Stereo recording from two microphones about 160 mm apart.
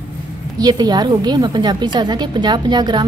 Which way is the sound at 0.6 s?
25° right (ahead or behind).